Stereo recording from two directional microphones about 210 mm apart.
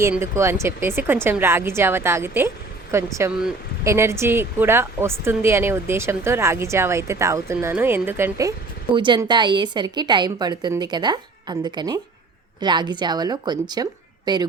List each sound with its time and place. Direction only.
0.0 s a woman's voice: 15° right (ahead or behind)